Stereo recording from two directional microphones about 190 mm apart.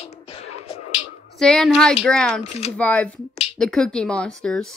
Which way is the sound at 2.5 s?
35° left (ahead or behind).